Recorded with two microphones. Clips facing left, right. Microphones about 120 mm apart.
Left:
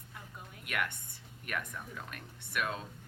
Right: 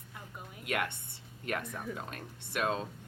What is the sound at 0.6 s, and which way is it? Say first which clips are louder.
A woman's voice: right 3 dB; 25° right (ahead or behind).